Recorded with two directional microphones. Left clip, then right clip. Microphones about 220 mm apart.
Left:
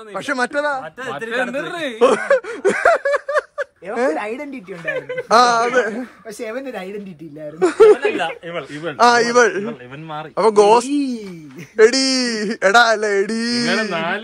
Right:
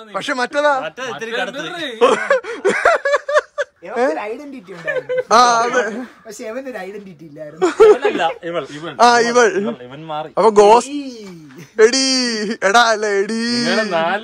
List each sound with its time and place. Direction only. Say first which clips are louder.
0.1 s speech: right 1 dB; 5° right (ahead or behind)
2.0 s snicker: right 1 dB; 5° right (ahead or behind)
4.8 s speech: right 4 dB; 45° right (ahead or behind)
5.3 s speech: right 1 dB; 10° right (ahead or behind)
8.0 s speech: right 3 dB; 50° right (ahead or behind)
8.8 s speech: right 1 dB; 10° right (ahead or behind)
13.9 s speech: right 4 dB; 50° right (ahead or behind)